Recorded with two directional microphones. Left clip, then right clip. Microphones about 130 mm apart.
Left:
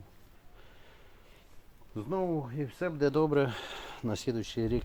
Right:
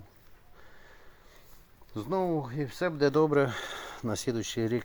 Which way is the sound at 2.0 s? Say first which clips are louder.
Right 3 dB; 25° right (ahead or behind).